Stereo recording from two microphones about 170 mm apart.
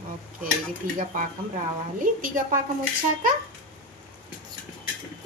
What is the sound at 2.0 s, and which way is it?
Speech, 55° right (ahead or behind).